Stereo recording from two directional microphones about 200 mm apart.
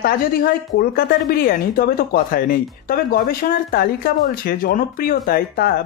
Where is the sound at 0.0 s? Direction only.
45° left (ahead or behind).